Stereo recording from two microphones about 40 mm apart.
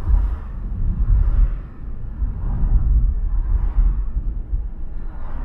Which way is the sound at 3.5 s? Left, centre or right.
Centre.